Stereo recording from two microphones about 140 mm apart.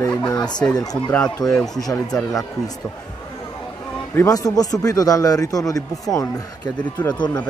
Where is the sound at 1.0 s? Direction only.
10° left (ahead or behind).